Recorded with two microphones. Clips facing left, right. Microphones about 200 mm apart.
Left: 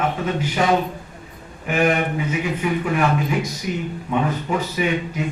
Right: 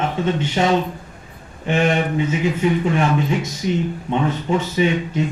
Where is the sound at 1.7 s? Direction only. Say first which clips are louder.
Right 1 dB; 25° right (ahead or behind).